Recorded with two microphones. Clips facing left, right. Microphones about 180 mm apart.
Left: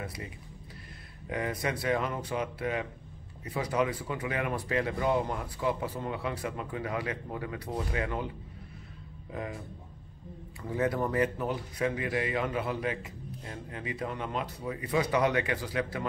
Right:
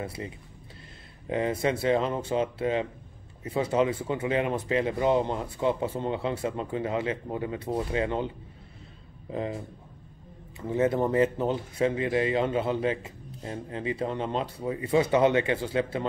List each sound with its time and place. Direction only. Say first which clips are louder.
0.0 s speech: right 5 dB; 25° right (ahead or behind)
1.3 s speech: right 6 dB; 25° right (ahead or behind)
9.3 s speech: right 6 dB; 25° right (ahead or behind)
10.6 s speech: right 5 dB; 25° right (ahead or behind)